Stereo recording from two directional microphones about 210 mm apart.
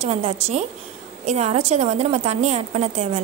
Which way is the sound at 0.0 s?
30° right (ahead or behind).